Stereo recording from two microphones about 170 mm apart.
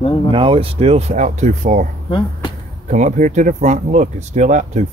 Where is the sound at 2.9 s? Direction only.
45° right (ahead or behind).